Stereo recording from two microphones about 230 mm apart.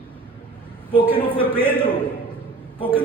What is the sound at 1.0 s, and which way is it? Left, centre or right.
Speech, centre.